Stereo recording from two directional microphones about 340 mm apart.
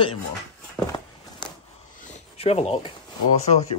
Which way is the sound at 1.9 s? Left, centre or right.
Left.